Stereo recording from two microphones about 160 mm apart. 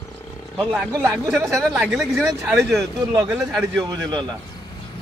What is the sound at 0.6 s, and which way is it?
Speech, 5° left (ahead or behind).